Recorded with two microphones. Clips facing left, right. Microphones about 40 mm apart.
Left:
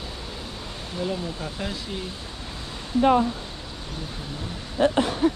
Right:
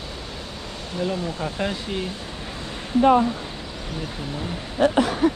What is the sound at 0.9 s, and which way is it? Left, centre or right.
Speech, centre.